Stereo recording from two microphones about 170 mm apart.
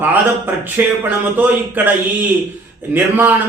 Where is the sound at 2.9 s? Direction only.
10° right (ahead or behind).